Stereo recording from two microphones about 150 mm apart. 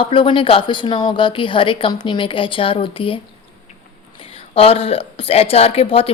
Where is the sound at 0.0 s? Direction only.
35° left (ahead or behind).